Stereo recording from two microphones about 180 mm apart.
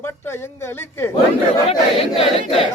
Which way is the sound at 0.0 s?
15° left (ahead or behind).